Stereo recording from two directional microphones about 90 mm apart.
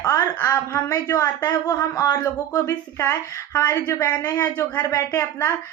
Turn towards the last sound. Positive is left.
turn(degrees=35)  # may be behind; listen again after turning